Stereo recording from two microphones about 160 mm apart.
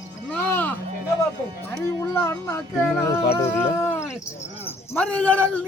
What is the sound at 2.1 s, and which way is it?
Speech, 15° left (ahead or behind).